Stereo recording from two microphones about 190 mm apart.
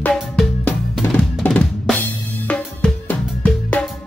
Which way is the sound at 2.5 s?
5° left (ahead or behind).